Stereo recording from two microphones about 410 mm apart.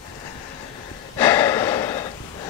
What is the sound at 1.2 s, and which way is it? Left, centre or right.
Gasp, centre.